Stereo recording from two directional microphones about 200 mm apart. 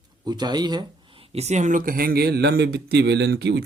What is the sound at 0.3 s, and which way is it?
Speech, 20° right (ahead or behind).